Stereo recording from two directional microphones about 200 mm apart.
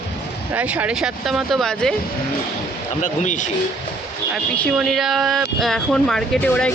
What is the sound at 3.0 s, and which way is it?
Speech, 40° left (ahead or behind).